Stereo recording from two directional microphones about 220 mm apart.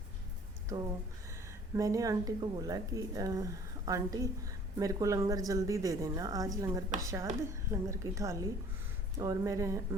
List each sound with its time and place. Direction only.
1.7 s speech: 15° right (ahead or behind)